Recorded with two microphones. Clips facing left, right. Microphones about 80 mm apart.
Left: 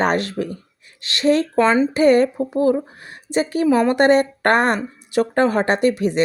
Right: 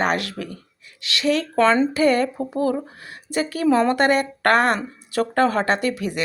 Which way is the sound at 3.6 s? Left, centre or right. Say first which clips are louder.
Left 2 dB; centre.